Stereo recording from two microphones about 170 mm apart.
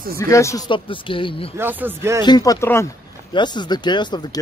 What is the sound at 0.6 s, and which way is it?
Speech, 30° left (ahead or behind).